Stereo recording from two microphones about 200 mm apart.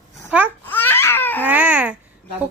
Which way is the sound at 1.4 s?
10° right (ahead or behind).